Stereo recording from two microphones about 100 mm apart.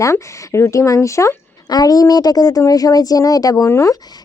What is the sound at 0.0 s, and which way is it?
Speech, 30° left (ahead or behind).